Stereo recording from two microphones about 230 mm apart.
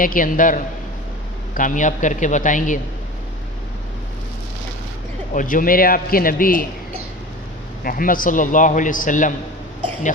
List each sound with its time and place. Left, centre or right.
0.0 s a man's voice: left
5.3 s a man's voice: left
7.9 s a man's voice: left